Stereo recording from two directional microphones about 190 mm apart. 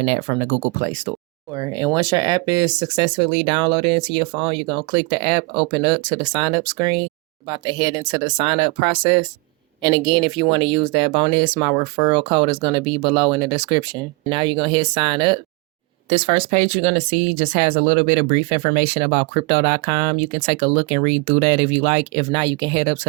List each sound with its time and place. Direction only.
0.1 s speech: 35° right (ahead or behind)
1.5 s speech: 20° right (ahead or behind)